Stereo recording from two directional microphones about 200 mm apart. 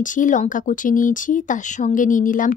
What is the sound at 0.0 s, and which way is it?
Speech, 40° left (ahead or behind).